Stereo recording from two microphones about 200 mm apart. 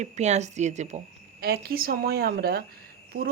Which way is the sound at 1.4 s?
55° right (ahead or behind).